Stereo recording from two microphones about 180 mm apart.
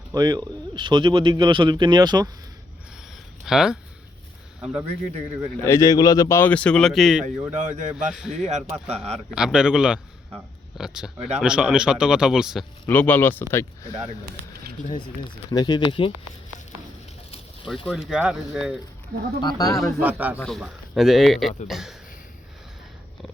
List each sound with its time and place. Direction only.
0.1 s a man's voice: 20° right (ahead or behind)
3.4 s speech: 5° right (ahead or behind)
5.6 s speech: 15° left (ahead or behind); by 7.3 s centre (ahead or behind)
7.5 s a man's voice: 45° right (ahead or behind)
7.9 s a man's voice: 5° right (ahead or behind)
8.4 s speech: 40° right (ahead or behind)
9.3 s a man's voice: 5° right (ahead or behind)
12.9 s speech: 10° left (ahead or behind)
14.9 s speech: 25° left (ahead or behind)
17.8 s a man's voice: centre (ahead or behind)
19.4 s speech: 20° left (ahead or behind)
20.0 s speech: 10° right (ahead or behind)
20.4 s a man's voice: centre (ahead or behind)